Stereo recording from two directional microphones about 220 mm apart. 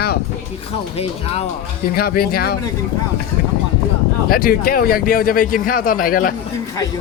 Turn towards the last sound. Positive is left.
turn(degrees=40)  # may be behind; listen again after turning